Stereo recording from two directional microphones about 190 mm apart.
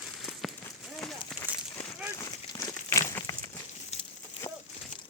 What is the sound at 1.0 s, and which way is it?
Run, 5° left (ahead or behind).